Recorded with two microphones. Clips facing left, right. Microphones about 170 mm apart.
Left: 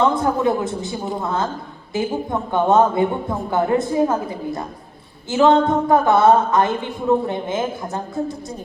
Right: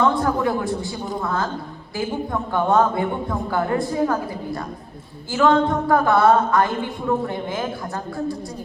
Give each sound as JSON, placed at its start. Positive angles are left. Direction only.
{"t": 0.0, "sound": "speech", "side_deg": 20}